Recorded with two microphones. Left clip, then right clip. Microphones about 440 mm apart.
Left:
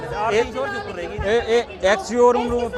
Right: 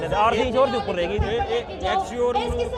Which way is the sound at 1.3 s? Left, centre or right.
Left.